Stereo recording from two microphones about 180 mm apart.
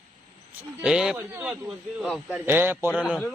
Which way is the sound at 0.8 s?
5° right (ahead or behind).